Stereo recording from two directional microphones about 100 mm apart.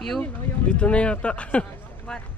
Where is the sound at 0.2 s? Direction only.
10° left (ahead or behind).